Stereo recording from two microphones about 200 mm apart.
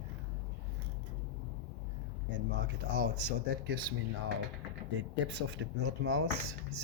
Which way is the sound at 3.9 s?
55° right (ahead or behind).